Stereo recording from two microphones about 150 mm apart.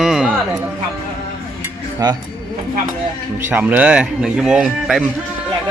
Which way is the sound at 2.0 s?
25° right (ahead or behind).